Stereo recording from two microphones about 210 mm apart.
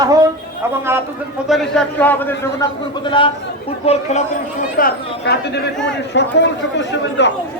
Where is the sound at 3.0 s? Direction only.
25° left (ahead or behind).